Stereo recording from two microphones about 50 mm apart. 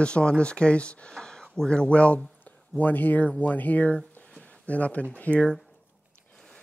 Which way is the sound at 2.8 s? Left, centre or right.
Left.